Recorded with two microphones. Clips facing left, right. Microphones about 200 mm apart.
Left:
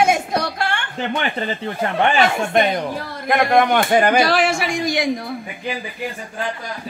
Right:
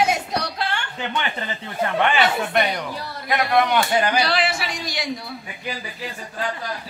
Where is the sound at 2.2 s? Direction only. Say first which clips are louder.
Left 3 dB; 45° left (ahead or behind).